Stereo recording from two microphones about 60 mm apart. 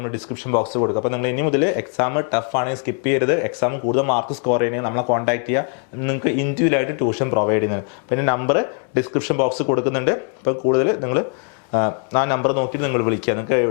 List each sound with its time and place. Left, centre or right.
0.0 s speech: left
0.8 s speech: left